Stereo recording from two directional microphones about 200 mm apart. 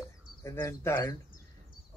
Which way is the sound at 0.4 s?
15° left (ahead or behind).